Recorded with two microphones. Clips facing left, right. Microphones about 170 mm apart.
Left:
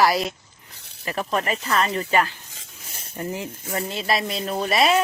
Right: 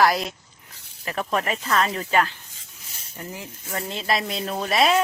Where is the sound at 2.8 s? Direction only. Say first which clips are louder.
Left 5 dB; 55° left (ahead or behind).